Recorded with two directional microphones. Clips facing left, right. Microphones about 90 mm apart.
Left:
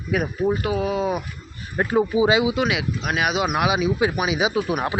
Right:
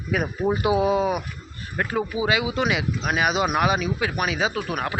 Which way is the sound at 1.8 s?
20° left (ahead or behind).